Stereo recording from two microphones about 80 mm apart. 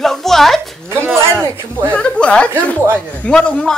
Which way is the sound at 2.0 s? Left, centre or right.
Centre.